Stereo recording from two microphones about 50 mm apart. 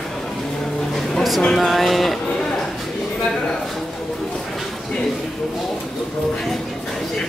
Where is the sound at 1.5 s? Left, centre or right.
Centre.